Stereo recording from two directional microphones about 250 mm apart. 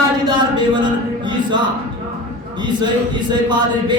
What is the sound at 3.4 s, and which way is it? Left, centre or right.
Speech, centre.